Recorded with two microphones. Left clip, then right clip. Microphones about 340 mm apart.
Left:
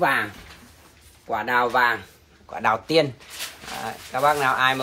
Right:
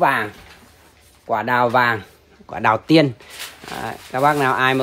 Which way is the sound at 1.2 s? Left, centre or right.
Right.